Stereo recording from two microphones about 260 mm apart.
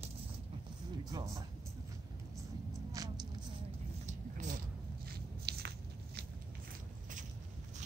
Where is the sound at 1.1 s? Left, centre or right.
Centre.